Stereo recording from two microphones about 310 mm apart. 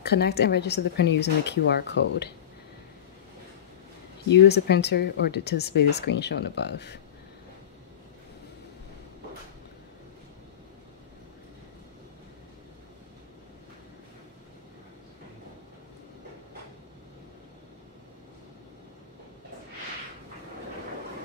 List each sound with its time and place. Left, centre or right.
0.0 s speech: left
4.3 s speech: left